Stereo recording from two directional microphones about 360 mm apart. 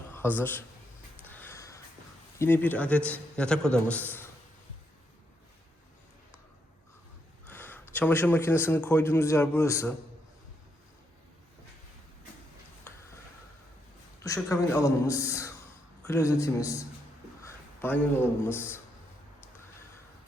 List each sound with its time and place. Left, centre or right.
0.1 s a man's voice: centre
1.2 s a sound: centre
2.4 s a man's voice: centre
7.4 s a man's voice: centre
14.3 s a man's voice: centre